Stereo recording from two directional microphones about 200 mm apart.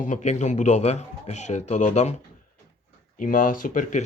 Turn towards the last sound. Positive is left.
turn(degrees=40)  # may be behind; listen again after turning